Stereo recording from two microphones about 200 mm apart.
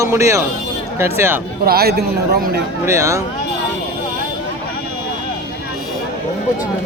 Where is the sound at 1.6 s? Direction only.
50° right (ahead or behind).